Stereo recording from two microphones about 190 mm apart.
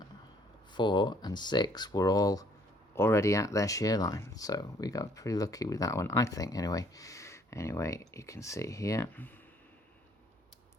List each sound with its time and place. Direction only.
0.7 s speech: 25° left (ahead or behind)